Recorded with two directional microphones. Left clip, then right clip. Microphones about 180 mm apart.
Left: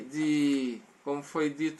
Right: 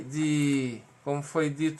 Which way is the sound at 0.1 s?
30° right (ahead or behind).